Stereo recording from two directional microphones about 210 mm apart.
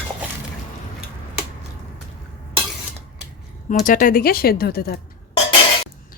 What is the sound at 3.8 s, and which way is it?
Speech, 40° left (ahead or behind).